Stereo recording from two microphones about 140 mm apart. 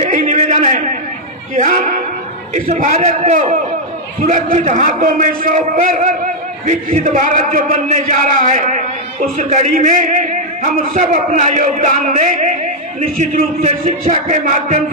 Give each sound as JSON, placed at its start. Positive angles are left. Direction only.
{"t": 0.0, "sound": "a sound", "side_deg": -60}
{"t": 1.6, "sound": "speech", "side_deg": -65}
{"t": 2.7, "sound": "a man's voice", "side_deg": -55}